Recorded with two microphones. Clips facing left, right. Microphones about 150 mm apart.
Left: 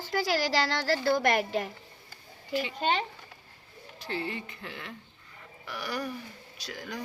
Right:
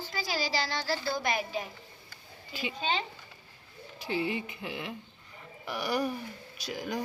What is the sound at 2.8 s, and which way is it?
Speech, 60° left (ahead or behind).